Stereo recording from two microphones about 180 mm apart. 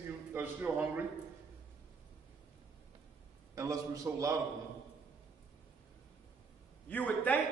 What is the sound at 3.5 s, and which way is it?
Speech, 15° right (ahead or behind).